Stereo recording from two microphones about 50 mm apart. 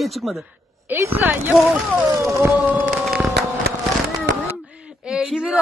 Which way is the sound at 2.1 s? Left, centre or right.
Right.